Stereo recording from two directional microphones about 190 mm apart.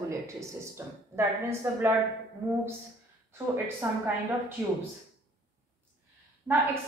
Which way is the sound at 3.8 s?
10° right (ahead or behind).